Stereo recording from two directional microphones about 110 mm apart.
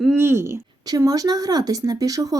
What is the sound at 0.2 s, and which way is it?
Speech, 25° right (ahead or behind).